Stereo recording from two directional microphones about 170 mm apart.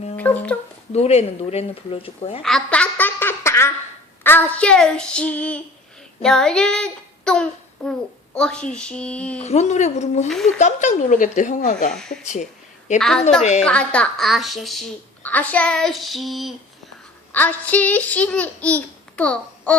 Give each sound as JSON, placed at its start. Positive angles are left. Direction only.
{"t": 0.2, "sound": "a child's voice", "side_deg": 10}
{"t": 0.9, "sound": "speech", "side_deg": 40}
{"t": 2.4, "sound": "a sound", "side_deg": 5}
{"t": 4.2, "sound": "a child's voice", "side_deg": 10}
{"t": 9.4, "sound": "speech", "side_deg": 40}
{"t": 10.2, "sound": "a woman's voice", "side_deg": 0}
{"t": 10.6, "sound": "speech", "side_deg": 45}
{"t": 11.9, "sound": "a woman's voice", "side_deg": 5}
{"t": 12.2, "sound": "speech", "side_deg": 45}
{"t": 13.0, "sound": "a woman's voice", "side_deg": 5}
{"t": 17.3, "sound": "a child's voice", "side_deg": 10}